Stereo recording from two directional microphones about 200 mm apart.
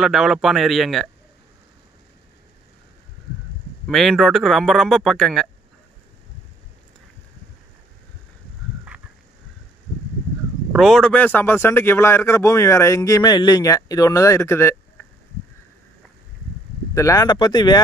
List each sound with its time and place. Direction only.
0.0 s speech: centre (ahead or behind)
3.8 s speech: centre (ahead or behind)
10.7 s speech: centre (ahead or behind)
16.9 s speech: 15° left (ahead or behind)